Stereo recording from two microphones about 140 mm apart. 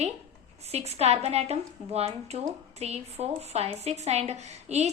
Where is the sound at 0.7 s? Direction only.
50° right (ahead or behind).